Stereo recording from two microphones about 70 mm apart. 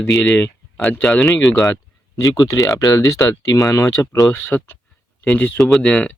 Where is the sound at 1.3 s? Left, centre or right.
Left.